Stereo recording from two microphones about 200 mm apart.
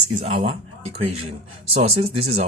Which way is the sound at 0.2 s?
30° right (ahead or behind).